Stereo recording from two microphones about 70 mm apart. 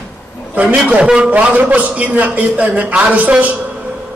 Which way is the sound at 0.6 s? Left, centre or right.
Centre.